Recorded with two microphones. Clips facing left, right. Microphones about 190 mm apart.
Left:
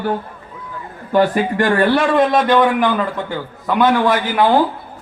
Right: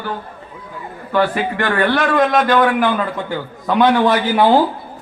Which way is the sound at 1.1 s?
40° left (ahead or behind).